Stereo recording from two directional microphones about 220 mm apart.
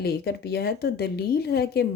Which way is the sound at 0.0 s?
45° left (ahead or behind).